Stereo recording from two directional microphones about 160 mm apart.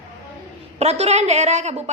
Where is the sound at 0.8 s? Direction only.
40° right (ahead or behind).